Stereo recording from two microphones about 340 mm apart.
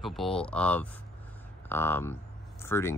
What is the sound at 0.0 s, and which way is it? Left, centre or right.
Speech, centre.